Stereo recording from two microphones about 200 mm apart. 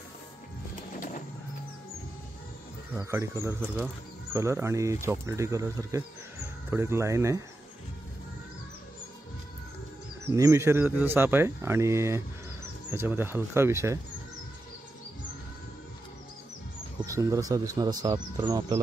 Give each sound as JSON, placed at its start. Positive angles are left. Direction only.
{"t": 0.9, "sound": "a sound", "side_deg": 40}
{"t": 2.9, "sound": "speech", "side_deg": -15}
{"t": 10.3, "sound": "speech", "side_deg": -15}
{"t": 17.0, "sound": "speech", "side_deg": -15}